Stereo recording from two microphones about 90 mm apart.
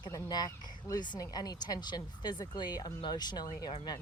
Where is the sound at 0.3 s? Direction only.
45° left (ahead or behind).